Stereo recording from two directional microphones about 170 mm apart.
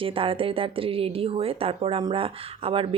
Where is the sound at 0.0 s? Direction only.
30° right (ahead or behind).